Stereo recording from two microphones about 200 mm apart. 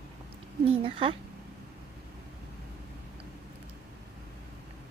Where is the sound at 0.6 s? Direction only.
25° right (ahead or behind).